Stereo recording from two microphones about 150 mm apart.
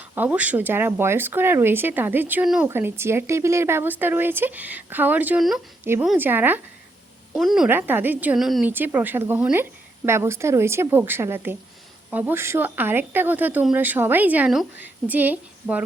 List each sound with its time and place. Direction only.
0.1 s a woman's voice: 10° right (ahead or behind)
7.3 s speech: centre (ahead or behind)
7.7 s speech: 10° right (ahead or behind)
8.4 s speech: centre (ahead or behind)
8.7 s speech: 15° right (ahead or behind)